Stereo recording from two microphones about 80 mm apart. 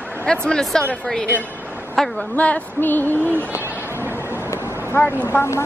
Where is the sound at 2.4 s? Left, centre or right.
Left.